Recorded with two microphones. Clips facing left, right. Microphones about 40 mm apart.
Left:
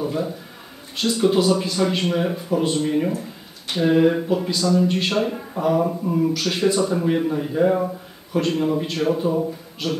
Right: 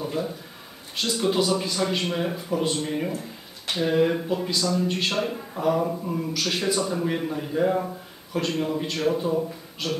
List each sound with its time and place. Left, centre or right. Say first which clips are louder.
1.0 s a man's voice: left 5 dB; centre
6.8 s a man's voice: left 6 dB; centre